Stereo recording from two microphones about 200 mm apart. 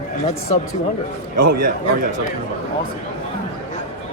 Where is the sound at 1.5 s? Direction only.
45° right (ahead or behind).